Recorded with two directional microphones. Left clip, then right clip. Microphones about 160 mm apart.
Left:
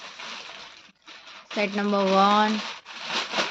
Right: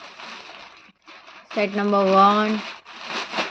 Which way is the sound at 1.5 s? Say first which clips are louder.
Right 4 dB; 10° right (ahead or behind).